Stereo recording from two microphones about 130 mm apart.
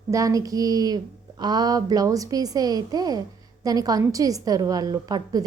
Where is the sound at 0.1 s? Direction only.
25° right (ahead or behind).